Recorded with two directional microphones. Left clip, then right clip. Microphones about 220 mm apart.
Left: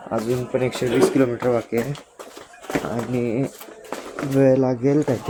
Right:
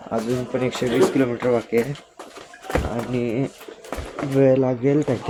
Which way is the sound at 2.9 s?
Centre (ahead or behind).